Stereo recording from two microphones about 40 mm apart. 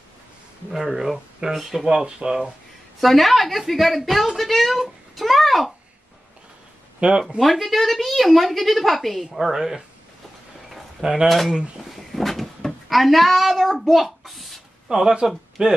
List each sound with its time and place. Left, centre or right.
0.7 s a woman's voice: centre
2.0 s speech: centre
3.0 s a woman's voice: centre
7.0 s speech: right
7.3 s a woman's voice: centre
9.4 s speech: centre
11.0 s speech: centre
11.2 s a woman's voice: centre
11.9 s a sound: centre
14.9 s speech: centre